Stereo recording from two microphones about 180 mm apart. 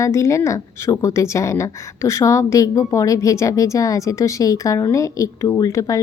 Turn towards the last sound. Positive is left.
turn(degrees=20)  # may be behind; listen again after turning